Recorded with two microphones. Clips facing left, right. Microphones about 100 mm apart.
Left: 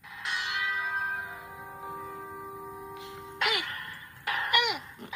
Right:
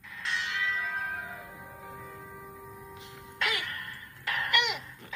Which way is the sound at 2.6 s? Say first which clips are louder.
Left 5 dB; 20° left (ahead or behind).